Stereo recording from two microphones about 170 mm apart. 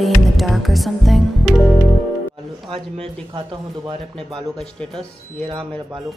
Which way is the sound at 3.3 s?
30° right (ahead or behind).